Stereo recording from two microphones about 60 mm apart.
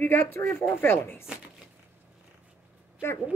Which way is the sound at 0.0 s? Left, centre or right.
Left.